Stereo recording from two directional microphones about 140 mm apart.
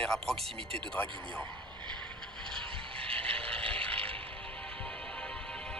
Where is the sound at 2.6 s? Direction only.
40° right (ahead or behind).